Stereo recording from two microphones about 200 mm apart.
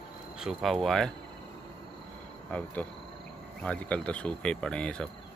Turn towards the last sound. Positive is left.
turn(degrees=5)  # may be behind; listen again after turning